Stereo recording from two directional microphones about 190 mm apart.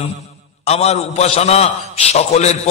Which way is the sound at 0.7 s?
35° left (ahead or behind).